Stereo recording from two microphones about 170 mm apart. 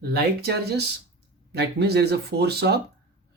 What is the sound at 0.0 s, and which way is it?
Speech, 70° right (ahead or behind).